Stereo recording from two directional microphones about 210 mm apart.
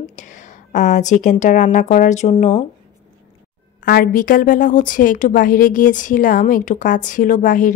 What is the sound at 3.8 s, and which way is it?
A woman's voice, 45° left (ahead or behind).